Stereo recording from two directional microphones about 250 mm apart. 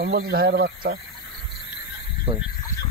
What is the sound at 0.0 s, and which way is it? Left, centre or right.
Speech, right.